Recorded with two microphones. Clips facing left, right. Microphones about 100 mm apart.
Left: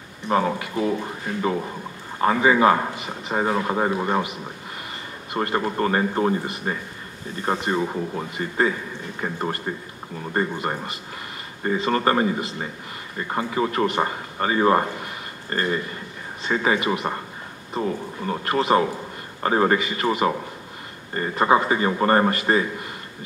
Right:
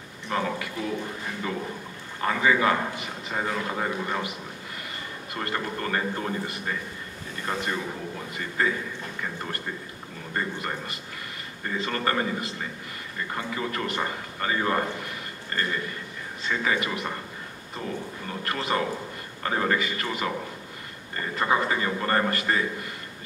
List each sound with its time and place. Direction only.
0.3 s a man's voice: 30° left (ahead or behind)
5.3 s a man's voice: 25° left (ahead or behind)
17.8 s a man's voice: 35° left (ahead or behind)
21.4 s a man's voice: 25° left (ahead or behind)